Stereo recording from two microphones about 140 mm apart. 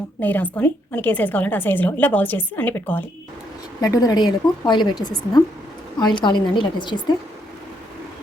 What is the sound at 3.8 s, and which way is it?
A woman's voice, 25° left (ahead or behind).